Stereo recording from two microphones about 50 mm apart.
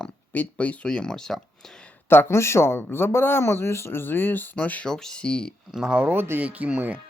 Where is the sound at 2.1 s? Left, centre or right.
Left.